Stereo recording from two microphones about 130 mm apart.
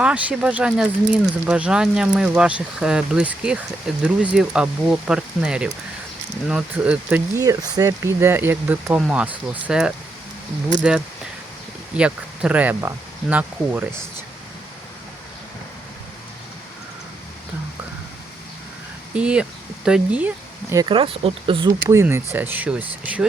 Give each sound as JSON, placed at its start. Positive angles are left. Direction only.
{"t": 0.0, "sound": "speech", "side_deg": -10}
{"t": 7.3, "sound": "speech", "side_deg": -25}
{"t": 11.9, "sound": "speech", "side_deg": -10}
{"t": 19.1, "sound": "speech", "side_deg": -10}
{"t": 20.7, "sound": "speech", "side_deg": -40}
{"t": 21.7, "sound": "speech", "side_deg": -25}